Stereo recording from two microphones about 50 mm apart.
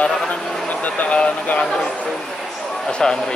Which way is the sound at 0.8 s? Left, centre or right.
Left.